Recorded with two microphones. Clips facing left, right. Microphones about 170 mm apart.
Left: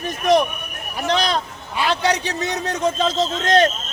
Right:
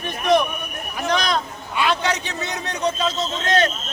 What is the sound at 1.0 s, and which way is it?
A man's voice, 30° left (ahead or behind).